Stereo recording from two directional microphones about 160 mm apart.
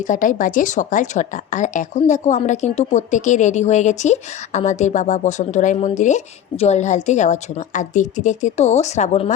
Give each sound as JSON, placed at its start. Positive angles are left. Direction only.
{"t": 0.1, "sound": "a woman's voice", "side_deg": 55}